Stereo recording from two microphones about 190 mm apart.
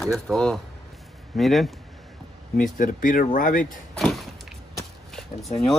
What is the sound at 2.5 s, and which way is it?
Speech, 45° left (ahead or behind).